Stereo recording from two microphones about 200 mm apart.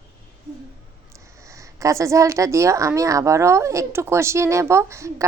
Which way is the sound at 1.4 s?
15° right (ahead or behind).